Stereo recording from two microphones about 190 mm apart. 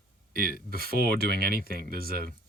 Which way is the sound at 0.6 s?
50° right (ahead or behind).